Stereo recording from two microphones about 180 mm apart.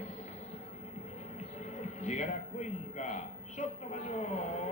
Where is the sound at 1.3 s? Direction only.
40° left (ahead or behind).